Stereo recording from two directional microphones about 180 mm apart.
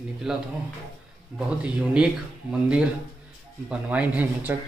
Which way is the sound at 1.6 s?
5° right (ahead or behind).